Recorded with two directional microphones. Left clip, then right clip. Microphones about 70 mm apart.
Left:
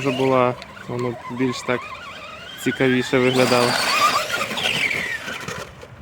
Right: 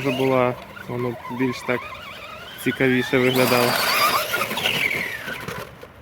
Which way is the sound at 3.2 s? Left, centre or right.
Right.